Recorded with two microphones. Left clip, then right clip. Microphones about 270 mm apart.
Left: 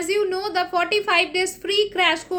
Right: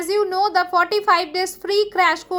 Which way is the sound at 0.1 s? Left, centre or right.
Centre.